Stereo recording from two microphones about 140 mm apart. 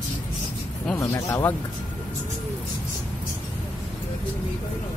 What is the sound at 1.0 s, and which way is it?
Speech, 20° left (ahead or behind).